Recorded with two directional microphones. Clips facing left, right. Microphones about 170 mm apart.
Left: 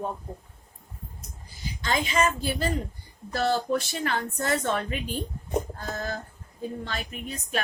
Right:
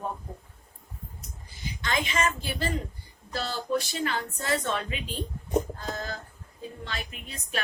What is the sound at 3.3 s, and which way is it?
Speech, 50° left (ahead or behind).